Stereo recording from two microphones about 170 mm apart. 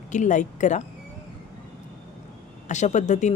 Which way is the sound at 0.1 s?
45° left (ahead or behind).